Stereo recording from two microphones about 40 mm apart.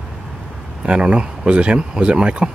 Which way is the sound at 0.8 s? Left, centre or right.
Right.